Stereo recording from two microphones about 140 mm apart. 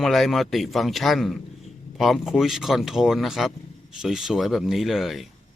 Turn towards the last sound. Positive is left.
turn(degrees=0)  # may be behind; listen again after turning